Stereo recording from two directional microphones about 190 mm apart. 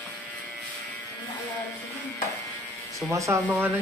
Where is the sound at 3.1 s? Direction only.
15° right (ahead or behind).